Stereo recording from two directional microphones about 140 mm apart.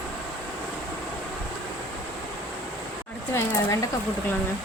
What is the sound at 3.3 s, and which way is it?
Speech, 20° left (ahead or behind).